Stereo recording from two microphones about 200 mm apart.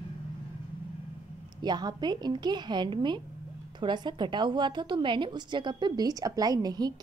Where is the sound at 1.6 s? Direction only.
20° right (ahead or behind).